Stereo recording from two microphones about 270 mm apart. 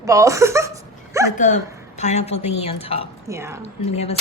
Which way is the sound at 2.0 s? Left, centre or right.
Left.